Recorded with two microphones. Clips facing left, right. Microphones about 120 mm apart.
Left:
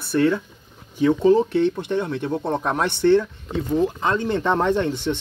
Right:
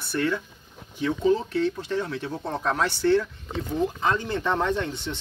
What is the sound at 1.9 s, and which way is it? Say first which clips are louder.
Speech: left 5 dB; 20° left (ahead or behind).